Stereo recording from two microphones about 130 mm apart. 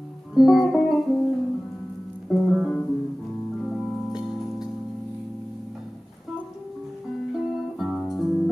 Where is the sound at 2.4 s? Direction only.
5° right (ahead or behind).